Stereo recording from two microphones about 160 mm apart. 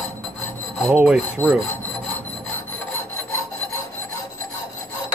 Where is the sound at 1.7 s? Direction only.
15° left (ahead or behind).